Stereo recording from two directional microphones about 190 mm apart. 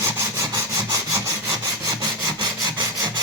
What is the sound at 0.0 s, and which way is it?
Wood, 15° right (ahead or behind).